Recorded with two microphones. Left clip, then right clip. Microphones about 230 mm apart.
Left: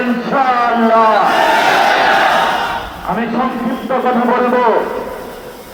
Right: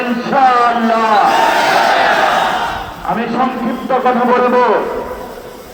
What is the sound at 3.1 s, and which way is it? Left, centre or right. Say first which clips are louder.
A man's voice: right 1 dB; right.